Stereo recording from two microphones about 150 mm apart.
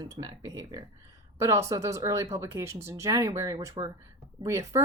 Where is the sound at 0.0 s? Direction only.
25° right (ahead or behind).